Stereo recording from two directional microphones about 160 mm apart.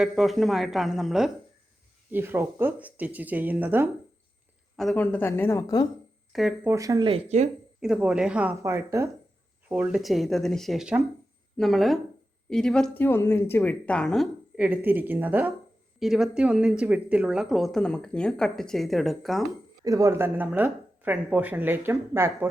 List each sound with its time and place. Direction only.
0.0 s speech: centre (ahead or behind)
2.1 s speech: 15° right (ahead or behind)
4.8 s speech: centre (ahead or behind)
5.0 s speech: 15° left (ahead or behind)
6.3 s speech: centre (ahead or behind)
6.7 s speech: 20° right (ahead or behind)
7.1 s speech: 45° right (ahead or behind)
7.8 s speech: 5° right (ahead or behind)
8.6 s speech: 20° right (ahead or behind); by 19.4 s centre (ahead or behind)
19.8 s speech: 20° right (ahead or behind)